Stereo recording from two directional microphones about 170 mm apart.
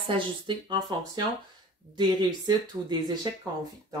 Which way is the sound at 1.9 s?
25° right (ahead or behind).